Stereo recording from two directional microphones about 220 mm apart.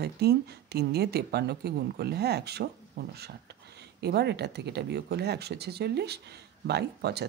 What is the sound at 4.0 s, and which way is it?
Speech, 50° right (ahead or behind).